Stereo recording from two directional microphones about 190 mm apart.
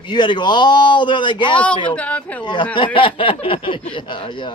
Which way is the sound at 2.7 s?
25° left (ahead or behind).